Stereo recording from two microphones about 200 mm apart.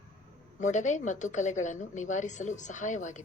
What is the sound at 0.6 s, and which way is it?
A woman's voice, 35° left (ahead or behind).